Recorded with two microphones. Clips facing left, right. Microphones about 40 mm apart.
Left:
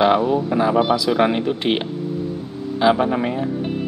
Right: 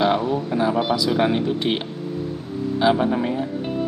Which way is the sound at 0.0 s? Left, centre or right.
Centre.